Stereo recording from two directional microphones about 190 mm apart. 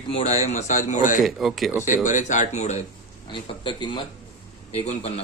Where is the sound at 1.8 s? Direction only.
40° left (ahead or behind).